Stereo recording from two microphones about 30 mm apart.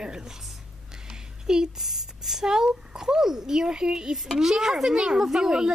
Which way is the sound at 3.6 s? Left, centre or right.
Right.